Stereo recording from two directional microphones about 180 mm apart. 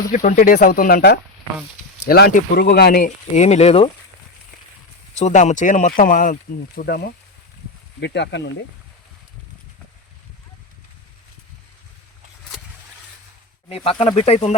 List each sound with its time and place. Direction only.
0.1 s speech: 45° left (ahead or behind)
3.3 s speech: 35° left (ahead or behind)
5.1 s speech: 40° left (ahead or behind); by 7.1 s 55° left (ahead or behind)
8.0 s speech: 70° left (ahead or behind)
13.7 s speech: 35° left (ahead or behind)